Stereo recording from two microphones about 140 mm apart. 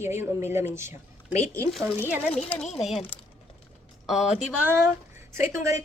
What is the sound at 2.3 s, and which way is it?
Speech, 5° left (ahead or behind).